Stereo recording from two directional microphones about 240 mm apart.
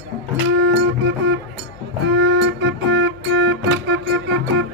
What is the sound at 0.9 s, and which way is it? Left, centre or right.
Music, right.